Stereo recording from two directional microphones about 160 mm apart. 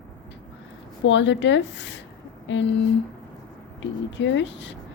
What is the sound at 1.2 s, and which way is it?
Speech, 90° left.